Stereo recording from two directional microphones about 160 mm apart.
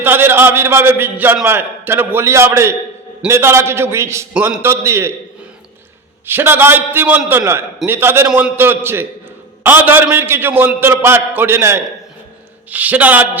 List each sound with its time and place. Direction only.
0.0 s a man's voice: 15° right (ahead or behind)
6.2 s a man's voice: 15° right (ahead or behind)